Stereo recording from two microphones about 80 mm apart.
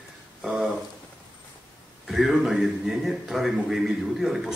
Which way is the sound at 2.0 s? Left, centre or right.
Centre.